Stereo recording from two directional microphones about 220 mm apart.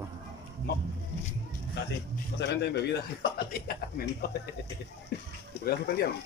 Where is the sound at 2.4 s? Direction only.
50° left (ahead or behind).